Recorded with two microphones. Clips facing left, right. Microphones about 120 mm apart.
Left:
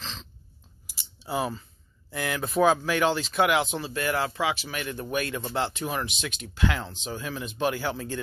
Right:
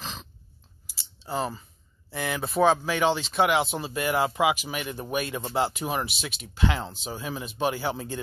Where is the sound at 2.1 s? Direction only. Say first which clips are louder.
Even; centre (ahead or behind).